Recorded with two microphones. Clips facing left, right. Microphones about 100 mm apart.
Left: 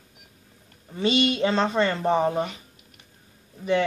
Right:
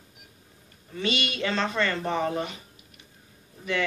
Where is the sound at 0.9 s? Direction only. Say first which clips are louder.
Left 7 dB; 30° left (ahead or behind).